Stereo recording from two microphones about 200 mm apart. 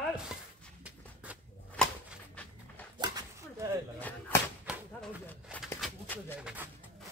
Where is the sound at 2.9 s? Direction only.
20° right (ahead or behind).